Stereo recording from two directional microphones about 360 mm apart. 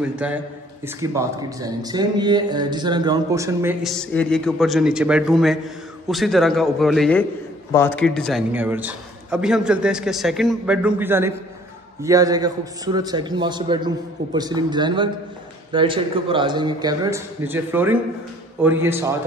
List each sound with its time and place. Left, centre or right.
0.0 s a man's voice: centre